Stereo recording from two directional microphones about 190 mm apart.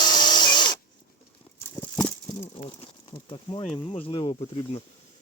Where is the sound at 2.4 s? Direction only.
30° left (ahead or behind).